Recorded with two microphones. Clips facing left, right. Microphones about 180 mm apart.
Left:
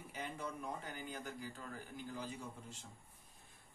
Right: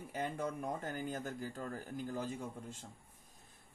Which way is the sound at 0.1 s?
50° right (ahead or behind).